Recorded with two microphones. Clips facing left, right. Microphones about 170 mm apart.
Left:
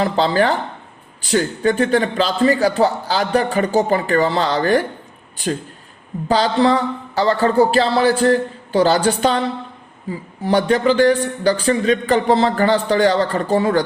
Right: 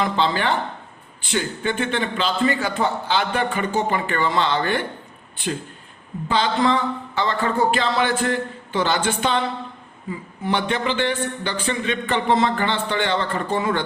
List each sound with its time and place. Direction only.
0.0 s speech: 40° left (ahead or behind)
6.2 s speech: 40° left (ahead or behind)